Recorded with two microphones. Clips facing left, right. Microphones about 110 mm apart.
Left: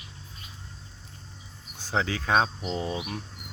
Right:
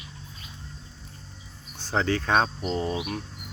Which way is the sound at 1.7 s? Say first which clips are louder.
Right 3 dB; 10° left (ahead or behind).